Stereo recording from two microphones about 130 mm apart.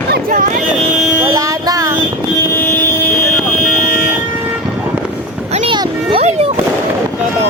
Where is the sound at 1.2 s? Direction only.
30° right (ahead or behind).